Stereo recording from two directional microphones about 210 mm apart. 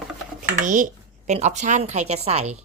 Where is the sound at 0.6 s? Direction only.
40° right (ahead or behind).